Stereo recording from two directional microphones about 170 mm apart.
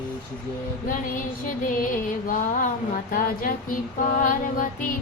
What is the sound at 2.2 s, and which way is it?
Music, 50° left (ahead or behind).